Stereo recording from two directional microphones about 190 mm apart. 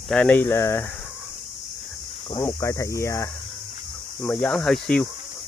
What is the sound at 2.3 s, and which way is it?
Speech, 15° left (ahead or behind).